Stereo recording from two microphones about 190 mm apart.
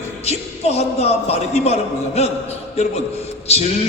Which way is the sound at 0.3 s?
35° left (ahead or behind).